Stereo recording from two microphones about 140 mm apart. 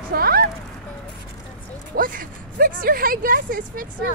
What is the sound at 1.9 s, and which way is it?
Speech, 80° right.